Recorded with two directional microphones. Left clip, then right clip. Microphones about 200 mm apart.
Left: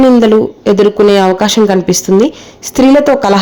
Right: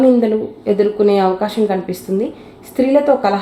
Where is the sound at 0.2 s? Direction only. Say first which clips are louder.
Left 9 dB; 45° left (ahead or behind).